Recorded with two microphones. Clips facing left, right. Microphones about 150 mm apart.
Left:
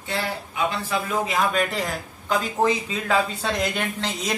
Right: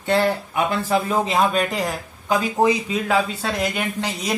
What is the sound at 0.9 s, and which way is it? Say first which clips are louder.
A man's voice: right 5 dB; 30° right (ahead or behind).